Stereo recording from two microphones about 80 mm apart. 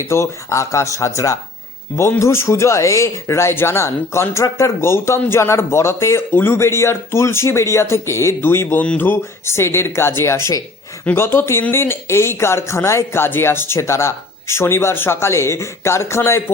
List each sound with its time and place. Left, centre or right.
0.1 s speech: left